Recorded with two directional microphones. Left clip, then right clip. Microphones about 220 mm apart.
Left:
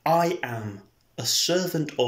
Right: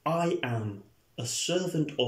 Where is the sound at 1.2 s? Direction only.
10° right (ahead or behind).